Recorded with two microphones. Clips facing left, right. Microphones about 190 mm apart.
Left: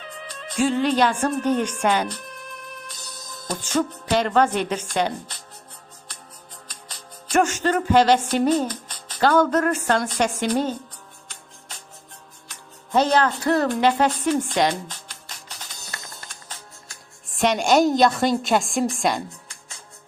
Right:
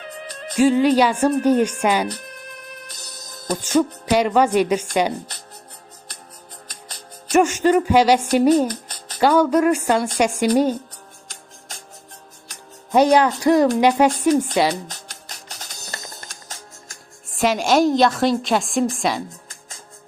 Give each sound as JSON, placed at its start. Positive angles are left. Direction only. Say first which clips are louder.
{"t": 0.0, "sound": "music", "louder": "right 4 dB", "side_deg": -45}
{"t": 0.5, "sound": "speech", "louder": "right 6 dB", "side_deg": -10}
{"t": 2.8, "sound": "music", "louder": "even", "side_deg": -40}
{"t": 3.6, "sound": "speech", "louder": "right 5 dB", "side_deg": -10}
{"t": 6.7, "sound": "music", "louder": "right 1 dB", "side_deg": -45}
{"t": 7.3, "sound": "speech", "louder": "right 5 dB", "side_deg": -10}
{"t": 8.7, "sound": "music", "louder": "right 3 dB", "side_deg": -40}
{"t": 9.1, "sound": "speech", "louder": "right 3 dB", "side_deg": -10}
{"t": 12.9, "sound": "a woman's voice", "louder": "right 4 dB", "side_deg": -15}
{"t": 14.8, "sound": "music", "louder": "right 2 dB", "side_deg": -40}
{"t": 17.3, "sound": "a woman's voice", "louder": "right 1 dB", "side_deg": 0}